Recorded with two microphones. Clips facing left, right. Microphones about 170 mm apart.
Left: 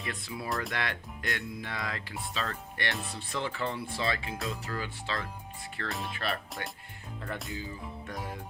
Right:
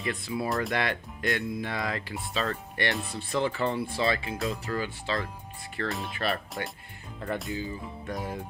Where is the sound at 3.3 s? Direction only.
40° right (ahead or behind).